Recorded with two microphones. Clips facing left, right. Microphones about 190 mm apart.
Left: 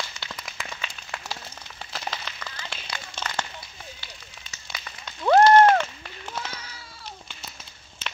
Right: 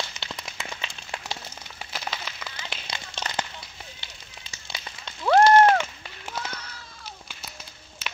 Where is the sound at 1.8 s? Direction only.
10° right (ahead or behind).